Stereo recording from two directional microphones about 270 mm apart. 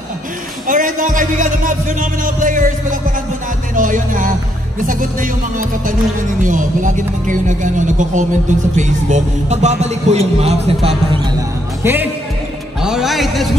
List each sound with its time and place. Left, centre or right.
0.7 s speech: right
11.8 s speech: centre